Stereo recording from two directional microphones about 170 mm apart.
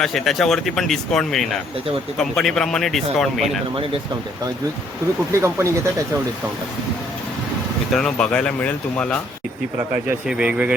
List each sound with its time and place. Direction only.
0.0 s speech: centre (ahead or behind)
5.3 s speech: 15° right (ahead or behind)
7.9 s speech: 5° left (ahead or behind)
10.1 s speech: 5° right (ahead or behind)